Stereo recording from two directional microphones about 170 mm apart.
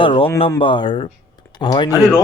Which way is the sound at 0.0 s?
30° left (ahead or behind).